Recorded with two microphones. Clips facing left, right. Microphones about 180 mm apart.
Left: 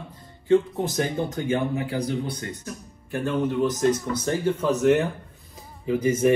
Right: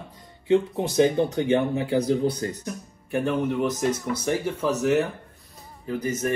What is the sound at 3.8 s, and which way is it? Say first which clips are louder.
Speech: left 3 dB; 10° right (ahead or behind).